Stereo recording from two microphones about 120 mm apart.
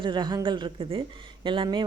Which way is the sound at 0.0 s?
40° right (ahead or behind).